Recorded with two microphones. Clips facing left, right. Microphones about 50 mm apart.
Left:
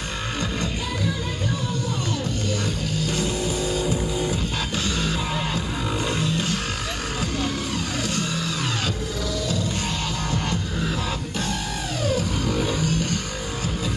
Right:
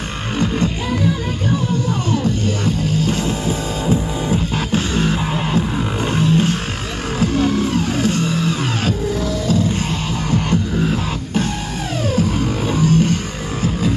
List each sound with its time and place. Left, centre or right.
2.6 s music: right
6.0 s a sound: right
7.2 s music: right
10.5 s music: right